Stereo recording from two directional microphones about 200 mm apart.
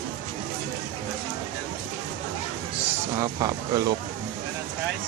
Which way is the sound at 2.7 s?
15° right (ahead or behind).